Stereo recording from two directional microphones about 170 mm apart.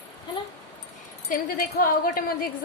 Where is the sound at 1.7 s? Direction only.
55° left (ahead or behind).